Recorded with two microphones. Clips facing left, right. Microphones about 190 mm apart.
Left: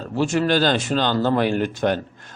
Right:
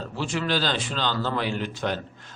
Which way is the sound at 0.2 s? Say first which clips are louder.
Left 8 dB; 50° left (ahead or behind).